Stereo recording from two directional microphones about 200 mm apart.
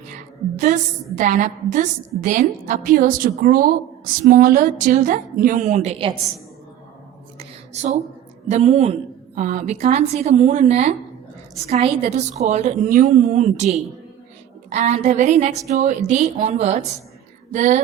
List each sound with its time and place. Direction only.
0.6 s a woman's voice: 40° right (ahead or behind)
7.3 s a sound: 35° right (ahead or behind)
8.4 s a woman's voice: 35° right (ahead or behind)